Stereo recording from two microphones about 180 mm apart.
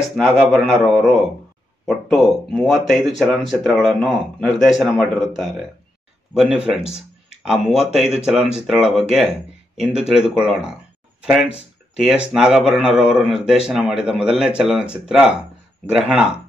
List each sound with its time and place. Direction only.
0.0 s speech: centre (ahead or behind)
6.8 s a sound: 35° left (ahead or behind)
7.4 s speech: 5° right (ahead or behind)
12.3 s speech: 5° right (ahead or behind)